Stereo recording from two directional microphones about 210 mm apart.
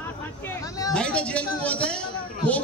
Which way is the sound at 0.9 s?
5° left (ahead or behind).